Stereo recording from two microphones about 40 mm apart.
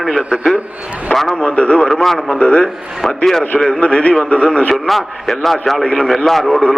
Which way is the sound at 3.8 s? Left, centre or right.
Left.